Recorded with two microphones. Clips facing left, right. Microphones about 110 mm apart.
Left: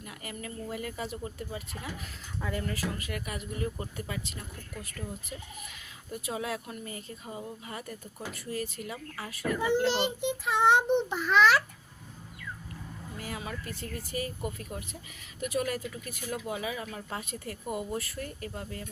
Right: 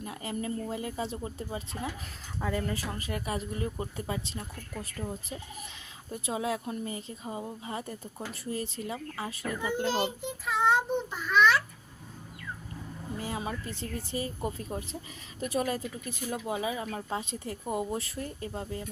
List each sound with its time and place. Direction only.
0.0 s speech: 25° right (ahead or behind)
9.6 s a child's voice: 85° left
13.1 s speech: 25° right (ahead or behind)